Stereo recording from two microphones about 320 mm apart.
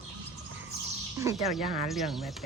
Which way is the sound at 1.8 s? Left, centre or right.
Centre.